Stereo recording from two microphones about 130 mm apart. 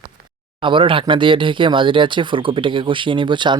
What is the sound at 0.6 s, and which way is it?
Speech, 40° right (ahead or behind).